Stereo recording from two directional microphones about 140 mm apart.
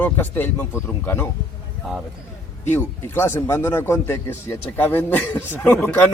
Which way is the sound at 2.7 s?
15° left (ahead or behind).